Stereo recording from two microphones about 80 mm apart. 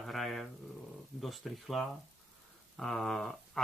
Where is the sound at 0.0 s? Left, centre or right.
Centre.